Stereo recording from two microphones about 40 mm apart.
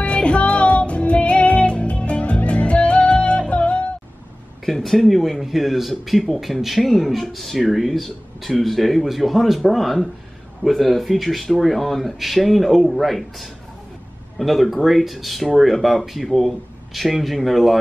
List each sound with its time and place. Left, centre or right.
0.0 s music: left
4.6 s speech: centre